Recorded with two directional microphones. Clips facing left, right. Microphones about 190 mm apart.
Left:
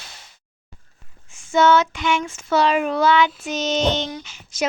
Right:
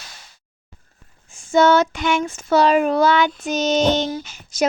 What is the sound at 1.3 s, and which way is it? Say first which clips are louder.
Child singing: right 2 dB; 35° right (ahead or behind).